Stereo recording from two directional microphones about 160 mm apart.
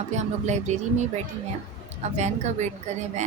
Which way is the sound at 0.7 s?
45° right (ahead or behind).